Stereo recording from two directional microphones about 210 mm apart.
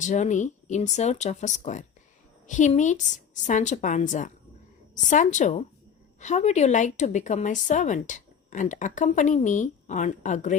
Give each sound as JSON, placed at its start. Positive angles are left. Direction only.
{"t": 0.0, "sound": "a woman's voice", "side_deg": 35}